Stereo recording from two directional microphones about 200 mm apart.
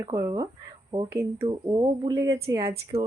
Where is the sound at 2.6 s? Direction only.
30° right (ahead or behind).